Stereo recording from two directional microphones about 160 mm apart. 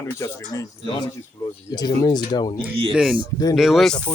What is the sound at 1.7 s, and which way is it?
Speech, 25° left (ahead or behind).